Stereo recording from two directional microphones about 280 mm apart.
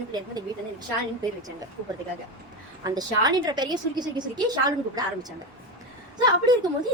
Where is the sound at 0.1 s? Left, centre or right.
Centre.